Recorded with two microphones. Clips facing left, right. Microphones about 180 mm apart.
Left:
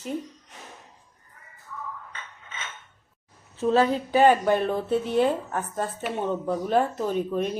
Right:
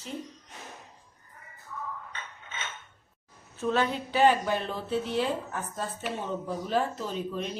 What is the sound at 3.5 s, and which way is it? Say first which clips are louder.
A woman's voice: left 6 dB; 35° left (ahead or behind).